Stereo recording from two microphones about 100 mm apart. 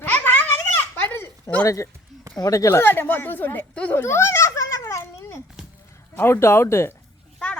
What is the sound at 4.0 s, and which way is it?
Babbling, 25° left (ahead or behind).